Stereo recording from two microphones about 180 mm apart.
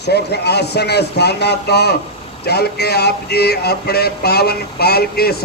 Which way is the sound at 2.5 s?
65° left (ahead or behind).